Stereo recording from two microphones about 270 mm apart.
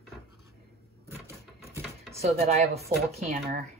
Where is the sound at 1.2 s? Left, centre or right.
Left.